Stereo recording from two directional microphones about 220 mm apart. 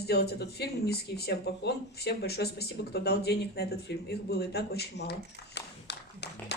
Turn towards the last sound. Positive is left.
turn(degrees=50)  # may be behind; listen again after turning